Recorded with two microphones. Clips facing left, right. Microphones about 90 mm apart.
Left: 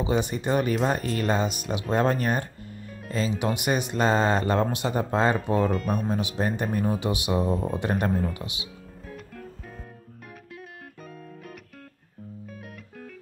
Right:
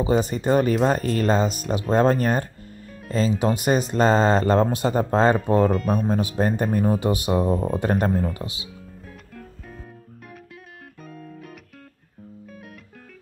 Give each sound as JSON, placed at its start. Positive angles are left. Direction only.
{"t": 0.0, "sound": "speech", "side_deg": -40}
{"t": 5.7, "sound": "speech", "side_deg": 0}
{"t": 6.0, "sound": "speech", "side_deg": -40}